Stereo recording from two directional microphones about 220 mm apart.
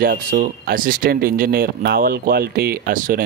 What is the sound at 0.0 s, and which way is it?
Speech, 40° right (ahead or behind).